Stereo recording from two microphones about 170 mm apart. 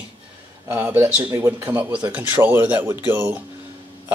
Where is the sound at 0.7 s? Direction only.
10° right (ahead or behind).